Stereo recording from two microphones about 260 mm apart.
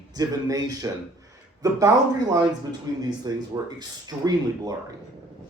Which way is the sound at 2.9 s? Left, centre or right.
Centre.